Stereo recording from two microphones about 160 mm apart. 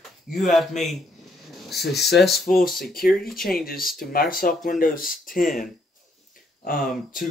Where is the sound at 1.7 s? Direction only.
90° left.